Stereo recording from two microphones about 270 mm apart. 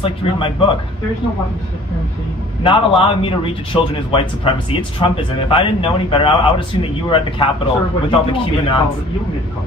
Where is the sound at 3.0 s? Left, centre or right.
Centre.